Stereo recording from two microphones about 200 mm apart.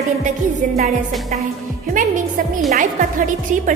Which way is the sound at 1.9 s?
40° right (ahead or behind).